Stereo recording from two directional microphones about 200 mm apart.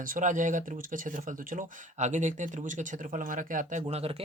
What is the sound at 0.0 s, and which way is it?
Speech, 40° right (ahead or behind).